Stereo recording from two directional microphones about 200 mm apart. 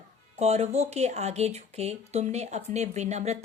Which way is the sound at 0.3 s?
30° right (ahead or behind).